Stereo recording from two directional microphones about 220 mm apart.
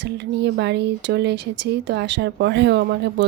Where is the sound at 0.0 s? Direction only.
50° right (ahead or behind).